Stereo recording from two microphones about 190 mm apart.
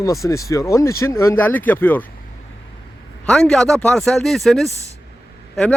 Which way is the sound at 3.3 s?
5° left (ahead or behind).